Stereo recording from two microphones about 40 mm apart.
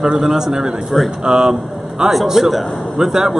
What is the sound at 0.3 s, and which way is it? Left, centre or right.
A man's voice, centre.